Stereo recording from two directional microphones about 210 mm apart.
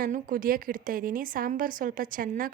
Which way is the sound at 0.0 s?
40° right (ahead or behind).